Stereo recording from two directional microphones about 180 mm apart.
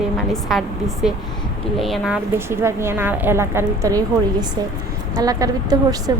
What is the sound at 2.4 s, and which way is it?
A woman's voice, 15° right (ahead or behind).